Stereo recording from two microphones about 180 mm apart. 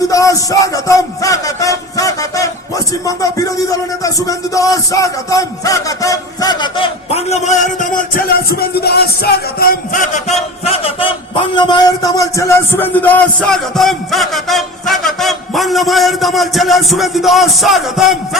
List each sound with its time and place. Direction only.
0.1 s a man's voice: 20° left (ahead or behind); by 18.2 s centre (ahead or behind)